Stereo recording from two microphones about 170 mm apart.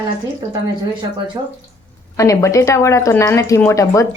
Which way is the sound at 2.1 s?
20° left (ahead or behind).